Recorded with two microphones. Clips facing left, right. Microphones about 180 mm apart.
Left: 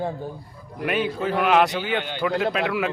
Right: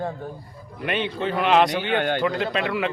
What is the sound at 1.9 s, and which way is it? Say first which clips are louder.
Speech: right 4 dB; 55° right (ahead or behind).